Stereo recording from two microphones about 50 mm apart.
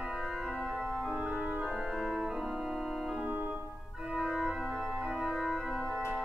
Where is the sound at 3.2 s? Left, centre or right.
Right.